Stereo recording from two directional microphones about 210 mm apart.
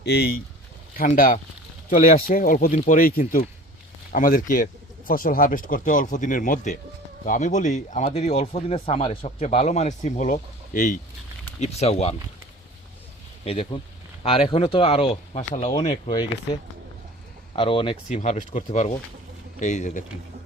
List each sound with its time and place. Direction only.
0.0 s speech: 50° left (ahead or behind); by 12.1 s 30° left (ahead or behind)
13.4 s speech: 25° left (ahead or behind)
17.5 s speech: 25° left (ahead or behind)